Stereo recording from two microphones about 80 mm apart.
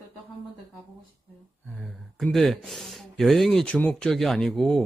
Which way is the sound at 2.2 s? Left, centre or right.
Centre.